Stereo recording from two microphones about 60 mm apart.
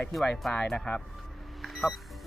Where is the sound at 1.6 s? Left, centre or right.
Centre.